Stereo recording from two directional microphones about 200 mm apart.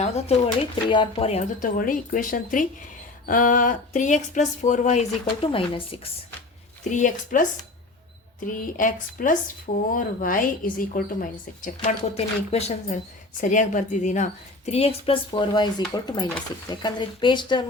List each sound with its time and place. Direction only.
0.0 s speech: 30° left (ahead or behind)
6.9 s speech: 40° left (ahead or behind)
8.4 s a woman's voice: 40° left (ahead or behind); by 17.7 s 25° left (ahead or behind)